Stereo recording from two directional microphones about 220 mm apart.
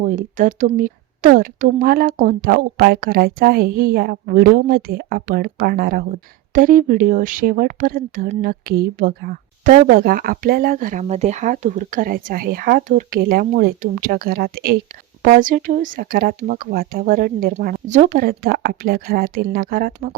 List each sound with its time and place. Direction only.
0.0 s speech: 35° right (ahead or behind)